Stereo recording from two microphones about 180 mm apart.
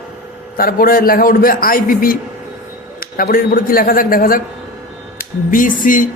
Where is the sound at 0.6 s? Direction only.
55° left (ahead or behind).